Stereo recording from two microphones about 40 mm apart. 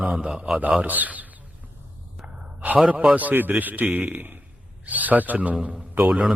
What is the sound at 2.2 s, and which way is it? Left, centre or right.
Sigh, right.